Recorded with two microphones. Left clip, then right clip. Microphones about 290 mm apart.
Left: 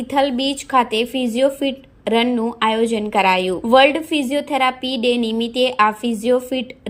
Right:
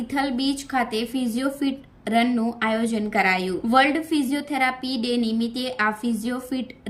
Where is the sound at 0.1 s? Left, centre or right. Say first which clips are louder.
Left 7 dB; centre.